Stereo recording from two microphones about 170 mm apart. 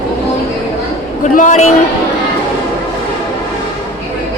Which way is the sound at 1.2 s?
45° left (ahead or behind).